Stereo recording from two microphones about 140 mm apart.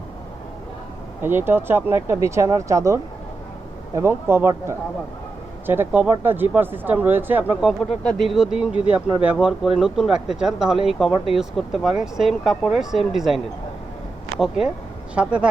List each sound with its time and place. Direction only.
1.2 s speech: 15° right (ahead or behind)